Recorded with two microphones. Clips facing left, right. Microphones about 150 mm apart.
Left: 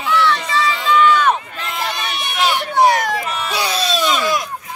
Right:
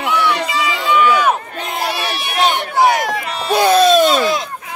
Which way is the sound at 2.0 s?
55° right (ahead or behind).